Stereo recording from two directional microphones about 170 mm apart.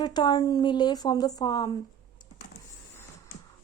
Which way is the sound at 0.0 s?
25° left (ahead or behind).